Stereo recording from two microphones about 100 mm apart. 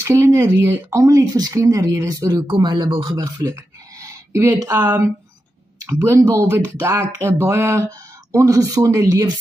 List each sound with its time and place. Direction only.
0.0 s speech: 30° right (ahead or behind)
2.4 s speech: 50° right (ahead or behind)
3.3 s a sound: 35° right (ahead or behind)
4.6 s speech: 35° right (ahead or behind)